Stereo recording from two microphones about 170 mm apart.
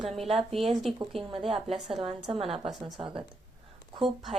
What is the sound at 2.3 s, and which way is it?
Speech, 35° right (ahead or behind).